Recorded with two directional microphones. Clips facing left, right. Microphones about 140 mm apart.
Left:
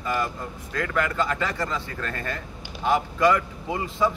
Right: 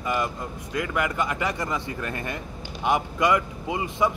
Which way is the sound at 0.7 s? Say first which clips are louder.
Even; 15° right (ahead or behind).